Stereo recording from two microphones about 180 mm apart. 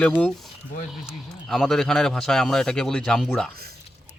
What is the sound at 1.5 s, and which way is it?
A man's voice, centre (ahead or behind).